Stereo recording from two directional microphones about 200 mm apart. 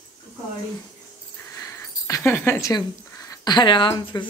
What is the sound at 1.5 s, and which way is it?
Speech, 15° left (ahead or behind).